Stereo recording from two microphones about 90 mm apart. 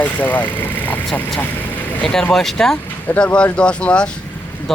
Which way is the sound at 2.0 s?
5° left (ahead or behind).